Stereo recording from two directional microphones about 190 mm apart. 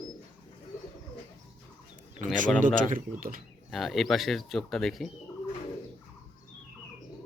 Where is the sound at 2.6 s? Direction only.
45° right (ahead or behind).